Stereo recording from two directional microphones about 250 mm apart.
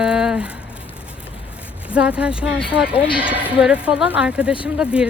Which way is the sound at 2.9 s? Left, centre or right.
Left.